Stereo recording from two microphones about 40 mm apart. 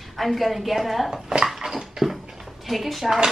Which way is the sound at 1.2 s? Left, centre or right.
Centre.